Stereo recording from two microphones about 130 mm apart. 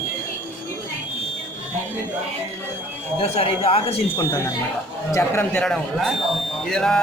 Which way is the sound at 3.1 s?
45° left (ahead or behind).